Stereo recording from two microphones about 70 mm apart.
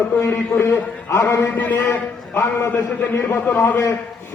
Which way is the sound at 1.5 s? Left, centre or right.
Left.